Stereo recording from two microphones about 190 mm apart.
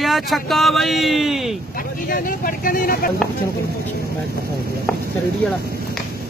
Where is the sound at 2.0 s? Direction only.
50° left (ahead or behind).